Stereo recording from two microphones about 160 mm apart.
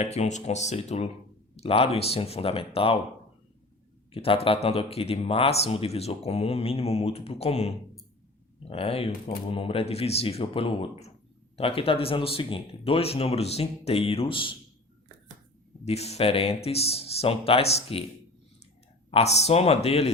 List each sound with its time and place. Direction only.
0.0 s speech: 45° left (ahead or behind)
4.1 s speech: 35° left (ahead or behind)
15.8 s speech: 40° left (ahead or behind)
19.1 s speech: 40° left (ahead or behind)